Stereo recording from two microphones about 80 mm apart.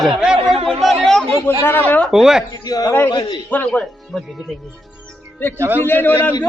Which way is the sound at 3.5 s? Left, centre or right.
Left.